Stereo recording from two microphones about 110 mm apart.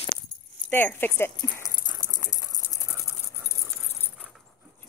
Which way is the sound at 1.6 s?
35° left (ahead or behind).